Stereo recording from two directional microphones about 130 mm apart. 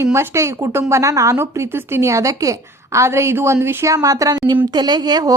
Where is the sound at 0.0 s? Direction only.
20° right (ahead or behind).